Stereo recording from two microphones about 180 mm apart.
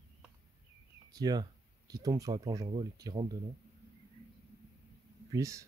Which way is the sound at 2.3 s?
30° right (ahead or behind).